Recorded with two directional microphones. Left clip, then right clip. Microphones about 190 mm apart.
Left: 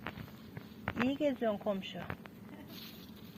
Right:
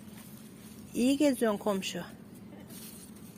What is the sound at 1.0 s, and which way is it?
Speech, 50° right (ahead or behind).